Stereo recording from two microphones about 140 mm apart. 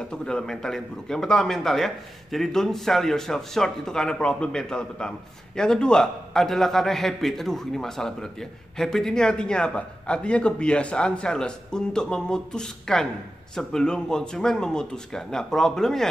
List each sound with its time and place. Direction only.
0.1 s a man's voice: 5° left (ahead or behind)